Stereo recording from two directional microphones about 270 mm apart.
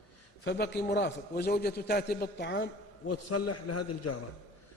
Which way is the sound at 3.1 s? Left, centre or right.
Left.